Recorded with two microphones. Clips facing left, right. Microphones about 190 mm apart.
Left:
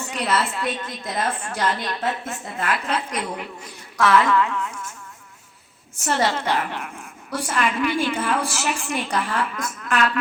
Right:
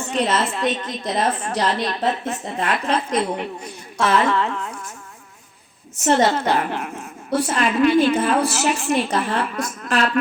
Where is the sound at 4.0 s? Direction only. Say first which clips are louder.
Even; 25° right (ahead or behind).